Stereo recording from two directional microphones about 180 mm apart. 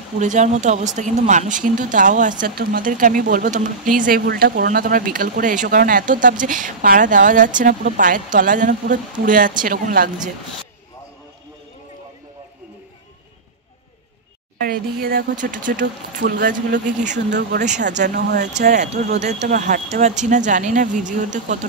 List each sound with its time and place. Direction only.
0.2 s speech: 40° right (ahead or behind)
2.4 s speech: 55° right (ahead or behind)
14.6 s speech: 55° right (ahead or behind)
17.3 s speech: 65° right (ahead or behind)
17.9 s speech: 45° right (ahead or behind)